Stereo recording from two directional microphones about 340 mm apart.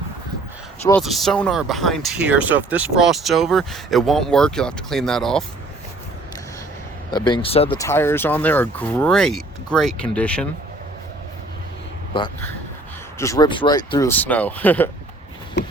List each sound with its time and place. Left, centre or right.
0.9 s speech: centre
7.1 s speech: centre
12.1 s speech: centre